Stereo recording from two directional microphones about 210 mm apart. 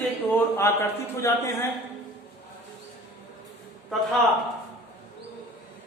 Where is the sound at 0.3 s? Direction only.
10° left (ahead or behind).